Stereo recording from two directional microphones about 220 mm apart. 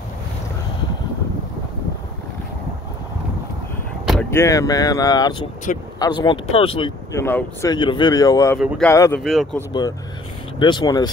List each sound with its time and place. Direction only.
4.1 s speech: 10° left (ahead or behind)
8.5 s speech: centre (ahead or behind)
8.8 s speech: 10° left (ahead or behind)
9.2 s speech: centre (ahead or behind)
9.7 s speech: 20° left (ahead or behind)